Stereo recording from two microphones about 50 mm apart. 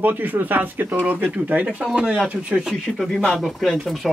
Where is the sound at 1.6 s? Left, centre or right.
Right.